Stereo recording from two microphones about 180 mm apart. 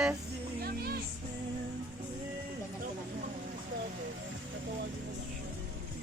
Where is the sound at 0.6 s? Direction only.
60° right (ahead or behind).